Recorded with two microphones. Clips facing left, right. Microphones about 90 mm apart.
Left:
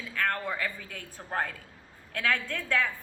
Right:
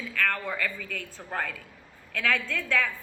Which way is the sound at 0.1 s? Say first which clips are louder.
Right 1 dB; 30° left (ahead or behind).